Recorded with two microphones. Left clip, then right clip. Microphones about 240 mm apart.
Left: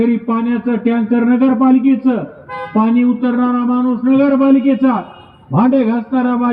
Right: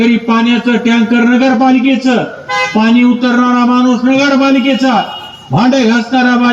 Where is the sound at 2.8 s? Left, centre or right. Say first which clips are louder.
Right 1 dB; right.